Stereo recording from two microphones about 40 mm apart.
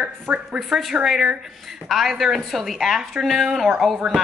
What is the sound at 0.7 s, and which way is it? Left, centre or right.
A woman's voice, centre.